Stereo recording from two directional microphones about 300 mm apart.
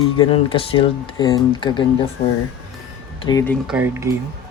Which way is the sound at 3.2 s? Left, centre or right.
Centre.